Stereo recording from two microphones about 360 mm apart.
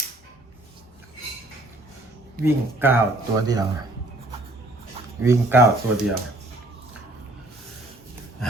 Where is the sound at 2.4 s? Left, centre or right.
Centre.